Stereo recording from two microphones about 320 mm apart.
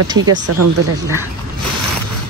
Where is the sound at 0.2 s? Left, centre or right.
Right.